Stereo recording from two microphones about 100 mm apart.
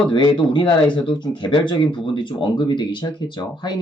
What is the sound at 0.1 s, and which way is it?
Speech, 55° left (ahead or behind).